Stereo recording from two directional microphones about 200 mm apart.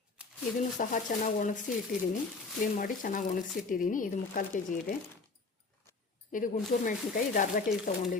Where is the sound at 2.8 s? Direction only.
40° left (ahead or behind).